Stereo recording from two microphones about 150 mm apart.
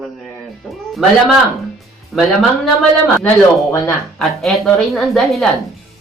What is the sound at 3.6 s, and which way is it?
Speech, 20° left (ahead or behind).